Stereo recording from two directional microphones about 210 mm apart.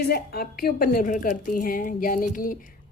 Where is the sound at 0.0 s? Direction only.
45° left (ahead or behind).